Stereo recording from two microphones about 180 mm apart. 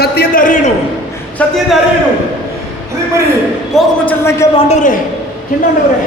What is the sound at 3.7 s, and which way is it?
Speech, centre (ahead or behind).